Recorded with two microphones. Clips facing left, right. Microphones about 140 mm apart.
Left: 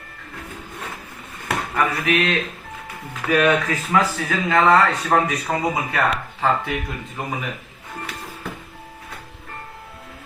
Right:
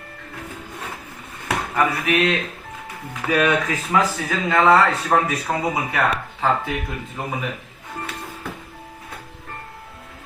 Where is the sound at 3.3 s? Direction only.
10° right (ahead or behind).